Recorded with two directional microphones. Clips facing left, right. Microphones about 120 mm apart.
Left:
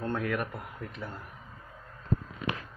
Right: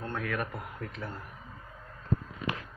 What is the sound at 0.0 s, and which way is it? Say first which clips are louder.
A man's voice: left 3 dB; 25° left (ahead or behind).